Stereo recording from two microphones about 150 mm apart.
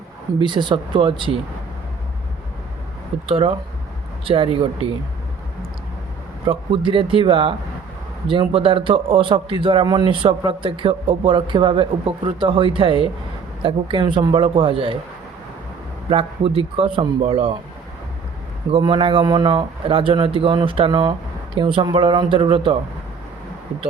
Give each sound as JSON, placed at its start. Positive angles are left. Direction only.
{"t": 0.3, "sound": "a man's voice", "side_deg": -30}
{"t": 3.2, "sound": "a man's voice", "side_deg": -40}
{"t": 4.5, "sound": "a man's voice", "side_deg": -40}
{"t": 6.4, "sound": "a man's voice", "side_deg": -35}
{"t": 16.0, "sound": "a man's voice", "side_deg": -40}
{"t": 18.7, "sound": "a man's voice", "side_deg": -35}